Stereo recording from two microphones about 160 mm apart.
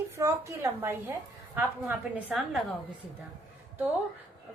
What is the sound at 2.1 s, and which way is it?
Speech, centre (ahead or behind).